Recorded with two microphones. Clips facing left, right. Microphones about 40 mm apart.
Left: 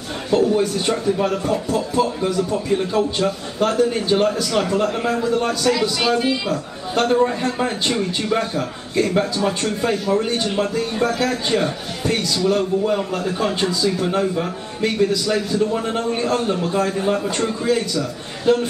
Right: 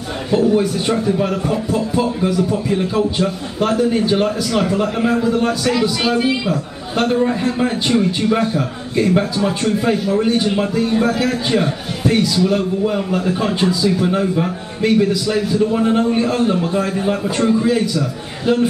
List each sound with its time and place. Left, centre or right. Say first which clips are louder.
0.3 s speech: right 2 dB; centre